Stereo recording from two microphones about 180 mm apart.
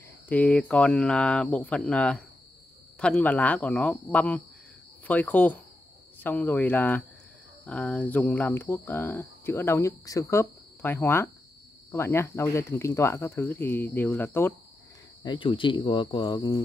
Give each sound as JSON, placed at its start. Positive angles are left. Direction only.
{"t": 0.3, "sound": "speech", "side_deg": 10}
{"t": 15.2, "sound": "speech", "side_deg": 25}